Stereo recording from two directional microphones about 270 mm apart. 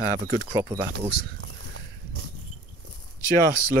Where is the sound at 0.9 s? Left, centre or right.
Right.